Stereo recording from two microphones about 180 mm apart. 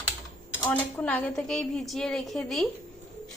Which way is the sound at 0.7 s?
10° left (ahead or behind).